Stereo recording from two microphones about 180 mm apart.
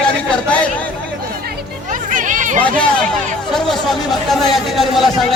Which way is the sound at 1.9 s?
45° right (ahead or behind).